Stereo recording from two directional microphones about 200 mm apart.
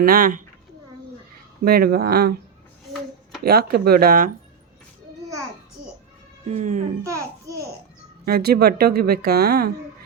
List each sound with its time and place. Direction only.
0.0 s speech: 45° right (ahead or behind)
1.6 s a woman's voice: 50° right (ahead or behind)
3.4 s a woman's voice: 50° right (ahead or behind)
6.5 s speech: 40° right (ahead or behind)
7.0 s a child's voice: 15° right (ahead or behind)
8.2 s a woman's voice: 50° right (ahead or behind)